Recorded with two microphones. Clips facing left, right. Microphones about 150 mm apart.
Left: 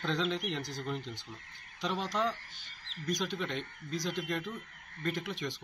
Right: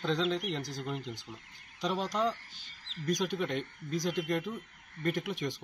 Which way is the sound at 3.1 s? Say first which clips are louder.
Right 3 dB; 15° right (ahead or behind).